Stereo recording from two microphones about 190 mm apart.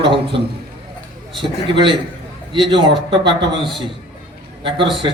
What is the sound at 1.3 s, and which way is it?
A man's voice, 25° right (ahead or behind).